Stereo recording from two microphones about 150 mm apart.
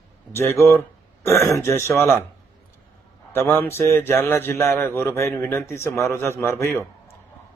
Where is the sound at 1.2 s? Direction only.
20° left (ahead or behind).